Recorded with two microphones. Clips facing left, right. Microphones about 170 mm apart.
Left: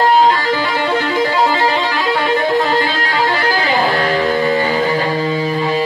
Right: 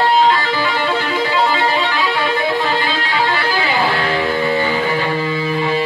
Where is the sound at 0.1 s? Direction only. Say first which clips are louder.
Left 2 dB; 40° left (ahead or behind).